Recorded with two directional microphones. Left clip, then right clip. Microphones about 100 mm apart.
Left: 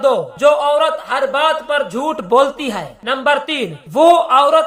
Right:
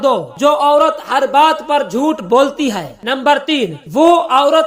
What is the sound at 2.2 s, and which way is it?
Speech, 20° right (ahead or behind).